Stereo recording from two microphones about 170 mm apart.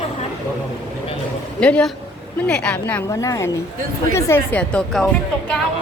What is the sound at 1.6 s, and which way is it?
A woman's voice, 5° left (ahead or behind).